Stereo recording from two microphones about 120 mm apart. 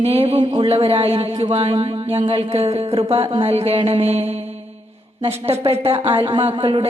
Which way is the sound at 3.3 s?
50° right (ahead or behind).